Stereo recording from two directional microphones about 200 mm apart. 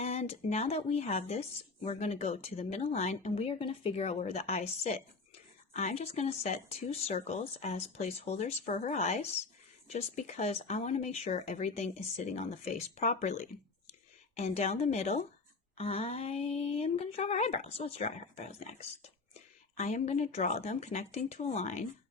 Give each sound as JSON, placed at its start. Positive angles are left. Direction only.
{"t": 0.0, "sound": "speech", "side_deg": 30}